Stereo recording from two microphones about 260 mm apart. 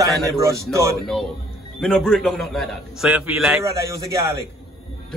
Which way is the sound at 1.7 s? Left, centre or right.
Centre.